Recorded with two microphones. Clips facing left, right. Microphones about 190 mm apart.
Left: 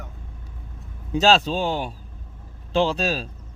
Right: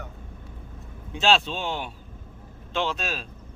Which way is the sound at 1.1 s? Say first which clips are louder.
Left 5 dB; 40° left (ahead or behind).